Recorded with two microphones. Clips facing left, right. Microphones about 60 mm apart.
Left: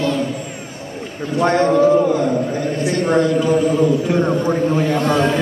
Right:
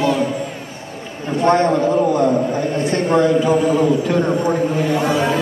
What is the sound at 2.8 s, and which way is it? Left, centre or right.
Speech, right.